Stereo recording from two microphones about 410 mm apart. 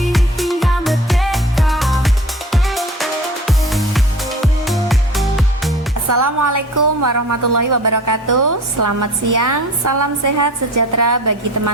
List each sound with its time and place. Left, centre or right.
0.0 s music: centre
6.1 s a woman's voice: right